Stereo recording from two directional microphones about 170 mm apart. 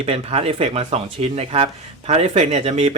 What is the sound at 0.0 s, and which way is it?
Speech, 35° right (ahead or behind).